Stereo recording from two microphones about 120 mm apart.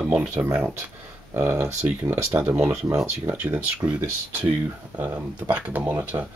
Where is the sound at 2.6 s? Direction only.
25° right (ahead or behind).